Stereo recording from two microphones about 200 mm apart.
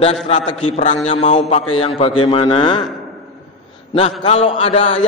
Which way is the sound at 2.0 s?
25° left (ahead or behind).